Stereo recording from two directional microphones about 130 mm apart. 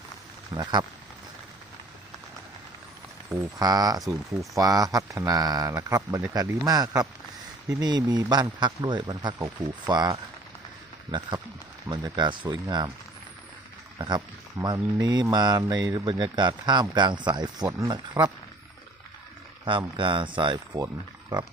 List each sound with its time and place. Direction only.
0.5 s speech: 30° right (ahead or behind)
3.3 s speech: 30° right (ahead or behind)
11.9 s speech: 35° right (ahead or behind)
14.6 s speech: 30° right (ahead or behind)
19.6 s speech: 40° right (ahead or behind)